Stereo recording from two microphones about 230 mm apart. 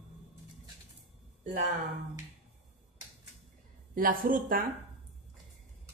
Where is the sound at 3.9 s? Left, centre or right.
Right.